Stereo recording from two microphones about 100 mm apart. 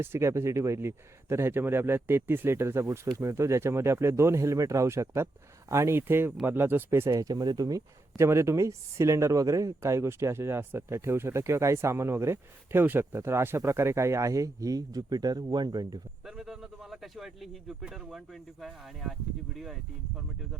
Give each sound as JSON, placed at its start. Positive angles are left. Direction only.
{"t": 0.0, "sound": "speech", "side_deg": -25}
{"t": 7.2, "sound": "speech", "side_deg": -40}
{"t": 8.1, "sound": "speech", "side_deg": -25}
{"t": 16.2, "sound": "speech", "side_deg": -5}